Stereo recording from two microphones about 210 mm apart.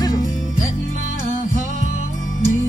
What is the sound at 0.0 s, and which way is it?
Music, 15° left (ahead or behind).